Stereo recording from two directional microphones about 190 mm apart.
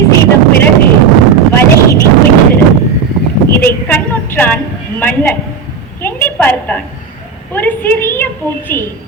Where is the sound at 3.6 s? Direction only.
10° left (ahead or behind).